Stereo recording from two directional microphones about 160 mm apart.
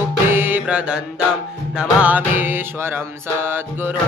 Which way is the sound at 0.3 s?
15° right (ahead or behind).